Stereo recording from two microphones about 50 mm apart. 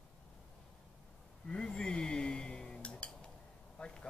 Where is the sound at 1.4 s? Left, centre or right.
Centre.